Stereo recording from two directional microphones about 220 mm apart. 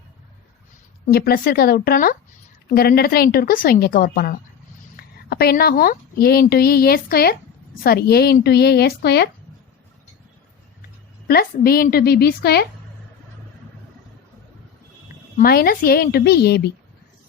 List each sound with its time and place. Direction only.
1.1 s a woman's voice: 45° left (ahead or behind)
11.3 s a woman's voice: 45° left (ahead or behind)
15.4 s a woman's voice: 45° left (ahead or behind)